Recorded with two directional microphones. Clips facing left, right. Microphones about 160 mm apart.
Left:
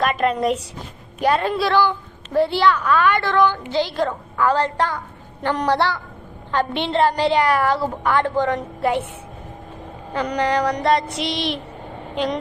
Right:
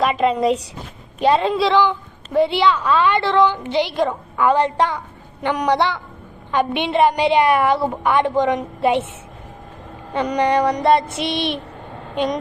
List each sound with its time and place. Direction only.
0.2 s a woman's voice: 10° right (ahead or behind)
1.2 s a child's voice: 20° right (ahead or behind)
10.2 s a child's voice: 20° right (ahead or behind)
11.3 s speech: 60° right (ahead or behind)